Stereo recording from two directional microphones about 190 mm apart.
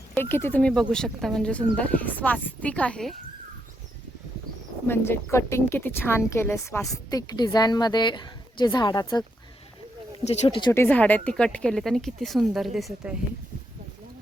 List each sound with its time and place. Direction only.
0.1 s speech: 10° left (ahead or behind)
4.9 s a woman's voice: 10° left (ahead or behind)
10.2 s speech: 30° left (ahead or behind)
10.7 s speech: 10° left (ahead or behind)